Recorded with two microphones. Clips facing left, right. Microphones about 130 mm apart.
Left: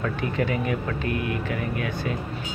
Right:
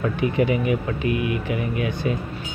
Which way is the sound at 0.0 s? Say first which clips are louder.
Right 5 dB; 15° right (ahead or behind).